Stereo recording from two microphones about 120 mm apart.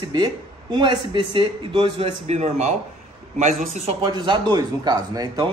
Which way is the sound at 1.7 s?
55° right (ahead or behind).